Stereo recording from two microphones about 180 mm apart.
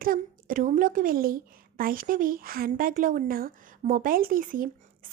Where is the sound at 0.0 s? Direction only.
50° right (ahead or behind).